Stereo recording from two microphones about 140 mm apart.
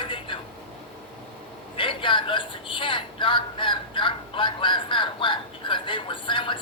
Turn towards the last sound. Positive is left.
turn(degrees=35)  # may be behind; listen again after turning